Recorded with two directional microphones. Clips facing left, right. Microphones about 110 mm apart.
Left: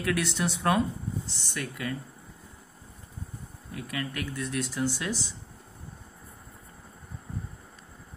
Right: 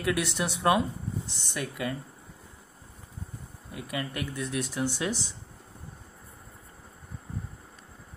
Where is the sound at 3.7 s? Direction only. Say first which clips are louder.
Even; 15° right (ahead or behind).